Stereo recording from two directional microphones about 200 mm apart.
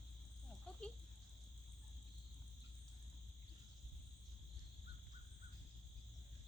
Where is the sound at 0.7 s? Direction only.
5° left (ahead or behind).